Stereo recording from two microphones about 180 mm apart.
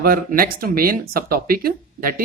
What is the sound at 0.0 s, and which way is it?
Speech, 55° right (ahead or behind).